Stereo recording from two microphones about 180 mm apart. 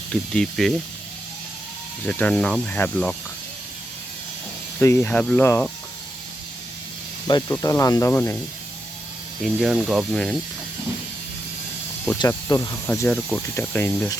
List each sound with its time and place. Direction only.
0.1 s speech: 5° left (ahead or behind)
2.0 s speech: 5° left (ahead or behind)
4.8 s speech: 15° left (ahead or behind)
7.3 s speech: 20° left (ahead or behind)
9.4 s speech: centre (ahead or behind)
12.3 s speech: 15° left (ahead or behind)